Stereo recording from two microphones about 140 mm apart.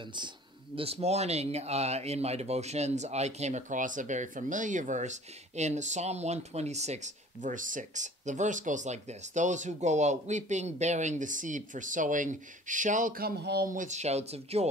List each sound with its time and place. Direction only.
0.7 s speech: 45° right (ahead or behind)